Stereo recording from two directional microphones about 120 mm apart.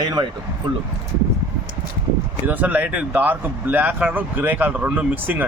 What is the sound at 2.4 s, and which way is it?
Speech, 15° right (ahead or behind).